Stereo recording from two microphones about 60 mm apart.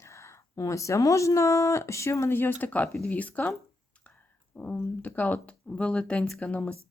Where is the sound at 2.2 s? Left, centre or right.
Left.